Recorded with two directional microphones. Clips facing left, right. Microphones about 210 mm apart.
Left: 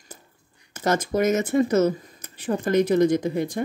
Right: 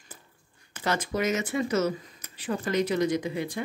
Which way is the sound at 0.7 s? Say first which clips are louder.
Left 6 dB; 45° left (ahead or behind).